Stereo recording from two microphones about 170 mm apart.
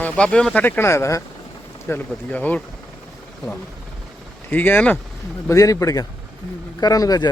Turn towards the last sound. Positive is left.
turn(degrees=20)  # may be behind; listen again after turning